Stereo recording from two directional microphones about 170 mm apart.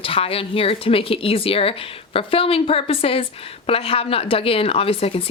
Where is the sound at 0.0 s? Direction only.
35° left (ahead or behind).